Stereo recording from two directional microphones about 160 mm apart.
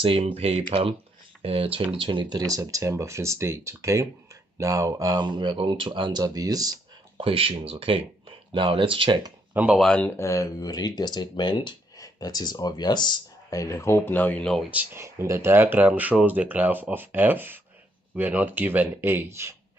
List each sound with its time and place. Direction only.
0.0 s speech: 35° right (ahead or behind)
7.2 s speech: 35° right (ahead or behind)
9.5 s speech: 10° right (ahead or behind)
9.8 s speech: 5° left (ahead or behind)
14.7 s speech: 10° right (ahead or behind)